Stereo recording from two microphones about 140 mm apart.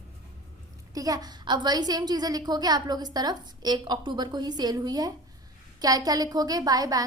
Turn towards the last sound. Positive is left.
turn(degrees=-25)  # may be behind; listen again after turning